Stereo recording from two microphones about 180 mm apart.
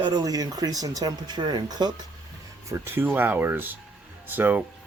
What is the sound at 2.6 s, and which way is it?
Speech, 15° right (ahead or behind).